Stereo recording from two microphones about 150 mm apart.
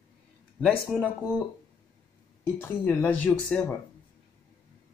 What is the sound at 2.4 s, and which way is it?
Speech, 10° left (ahead or behind).